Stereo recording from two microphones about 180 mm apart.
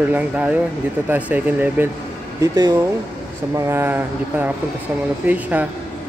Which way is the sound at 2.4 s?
20° right (ahead or behind).